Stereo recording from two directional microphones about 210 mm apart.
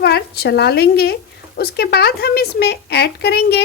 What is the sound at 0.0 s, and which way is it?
A woman's voice, 50° left (ahead or behind).